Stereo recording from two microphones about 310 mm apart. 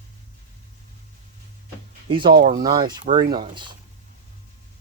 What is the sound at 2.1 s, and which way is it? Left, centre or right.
Speech, centre.